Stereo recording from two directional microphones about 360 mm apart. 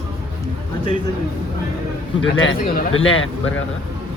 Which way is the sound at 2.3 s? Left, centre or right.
Left.